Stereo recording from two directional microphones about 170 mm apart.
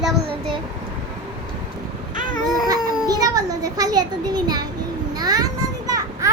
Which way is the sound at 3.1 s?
20° right (ahead or behind).